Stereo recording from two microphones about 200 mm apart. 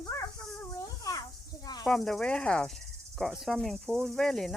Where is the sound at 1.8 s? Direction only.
Centre (ahead or behind).